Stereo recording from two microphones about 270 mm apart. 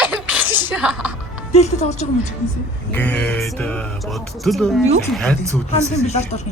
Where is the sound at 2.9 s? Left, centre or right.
Centre.